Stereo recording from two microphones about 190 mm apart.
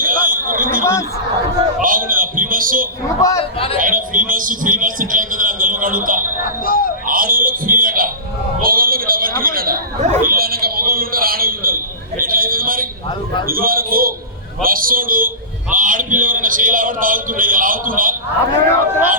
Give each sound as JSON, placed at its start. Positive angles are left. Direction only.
{"t": 0.0, "sound": "a sound", "side_deg": -45}
{"t": 3.2, "sound": "speech", "side_deg": 15}
{"t": 3.8, "sound": "a man's voice", "side_deg": -45}
{"t": 6.7, "sound": "music", "side_deg": 50}
{"t": 7.1, "sound": "music", "side_deg": -50}
{"t": 8.6, "sound": "chatter", "side_deg": -50}
{"t": 13.5, "sound": "a man's voice", "side_deg": -50}